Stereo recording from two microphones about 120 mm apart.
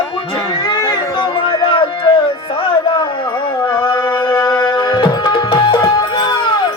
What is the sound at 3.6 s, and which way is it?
Music, 20° left (ahead or behind).